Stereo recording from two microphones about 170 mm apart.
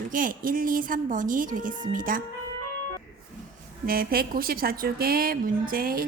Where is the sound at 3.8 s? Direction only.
60° right (ahead or behind).